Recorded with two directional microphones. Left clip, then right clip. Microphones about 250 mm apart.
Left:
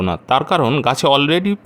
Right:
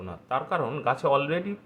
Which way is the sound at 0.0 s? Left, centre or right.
Left.